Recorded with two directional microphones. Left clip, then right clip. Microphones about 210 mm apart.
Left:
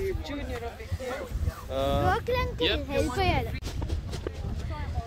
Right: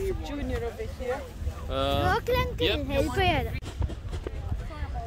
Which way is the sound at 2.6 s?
50° right (ahead or behind).